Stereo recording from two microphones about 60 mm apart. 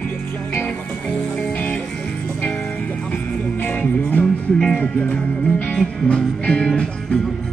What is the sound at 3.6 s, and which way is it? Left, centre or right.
Music, left.